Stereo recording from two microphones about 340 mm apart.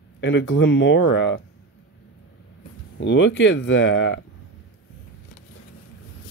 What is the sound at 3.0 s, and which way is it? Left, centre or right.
Speech, left.